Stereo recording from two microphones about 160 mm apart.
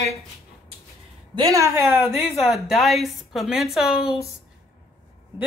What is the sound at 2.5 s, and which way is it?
Speech, centre (ahead or behind).